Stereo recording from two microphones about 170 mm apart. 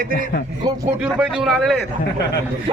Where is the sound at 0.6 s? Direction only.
25° right (ahead or behind).